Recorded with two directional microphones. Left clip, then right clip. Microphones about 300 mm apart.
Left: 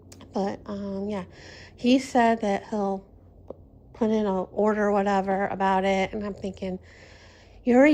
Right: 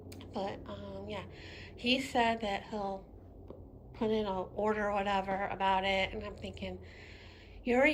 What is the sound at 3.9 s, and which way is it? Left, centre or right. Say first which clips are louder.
A woman's voice: left 8 dB; left.